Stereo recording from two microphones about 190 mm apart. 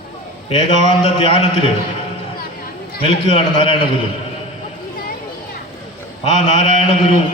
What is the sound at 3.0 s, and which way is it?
Speech, 30° left (ahead or behind).